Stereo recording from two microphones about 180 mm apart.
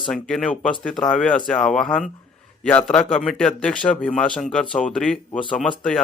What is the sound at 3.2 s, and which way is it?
Speech, 5° left (ahead or behind).